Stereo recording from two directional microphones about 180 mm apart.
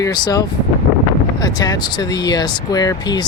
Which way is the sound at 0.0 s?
20° left (ahead or behind).